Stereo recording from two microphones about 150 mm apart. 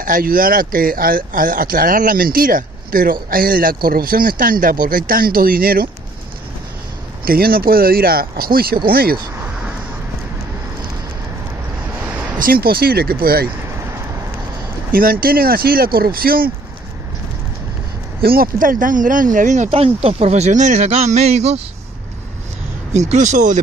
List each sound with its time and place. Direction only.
0.0 s speech: 65° right (ahead or behind)
7.2 s speech: 85° right
12.4 s speech: 80° right
14.9 s speech: 75° right (ahead or behind)
18.2 s speech: 85° right; by 21.5 s 45° right (ahead or behind)
22.9 s speech: 50° right (ahead or behind)